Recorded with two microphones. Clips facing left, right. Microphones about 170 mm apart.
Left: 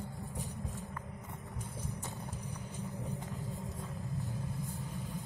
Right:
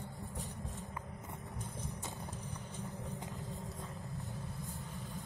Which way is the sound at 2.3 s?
35° left (ahead or behind).